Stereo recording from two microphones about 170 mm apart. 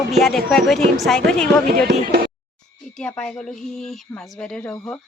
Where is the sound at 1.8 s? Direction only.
70° right (ahead or behind).